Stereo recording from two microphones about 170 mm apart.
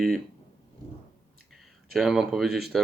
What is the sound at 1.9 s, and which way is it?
Speech, centre (ahead or behind).